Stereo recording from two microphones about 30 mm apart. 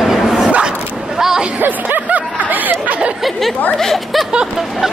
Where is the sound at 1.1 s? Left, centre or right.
Centre.